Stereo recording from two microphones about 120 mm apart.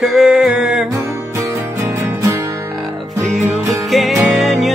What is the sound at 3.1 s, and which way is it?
Music, 25° right (ahead or behind).